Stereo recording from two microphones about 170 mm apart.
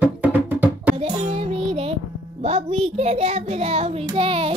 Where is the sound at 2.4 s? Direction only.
35° right (ahead or behind).